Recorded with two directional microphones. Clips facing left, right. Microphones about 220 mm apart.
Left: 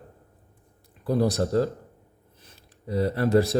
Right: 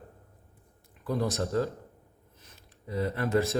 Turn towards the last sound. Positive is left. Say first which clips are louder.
# left 6 dB
turn(degrees=35)  # may be behind; listen again after turning